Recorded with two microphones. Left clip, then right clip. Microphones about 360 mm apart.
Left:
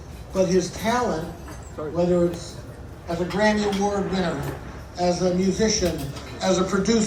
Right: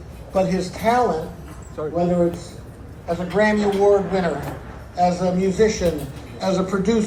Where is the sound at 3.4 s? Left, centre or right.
Centre.